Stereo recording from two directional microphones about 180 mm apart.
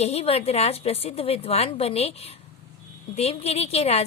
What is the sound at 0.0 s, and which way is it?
A woman's voice, 35° left (ahead or behind).